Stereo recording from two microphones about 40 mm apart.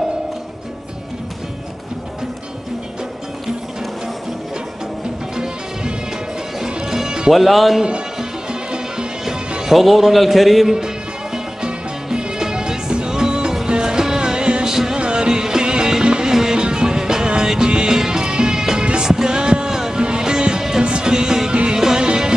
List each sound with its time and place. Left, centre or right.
5.3 s music: centre
7.3 s a man's voice: centre
8.2 s music: centre
9.6 s a man's voice: centre
11.3 s music: right
15.0 s music: right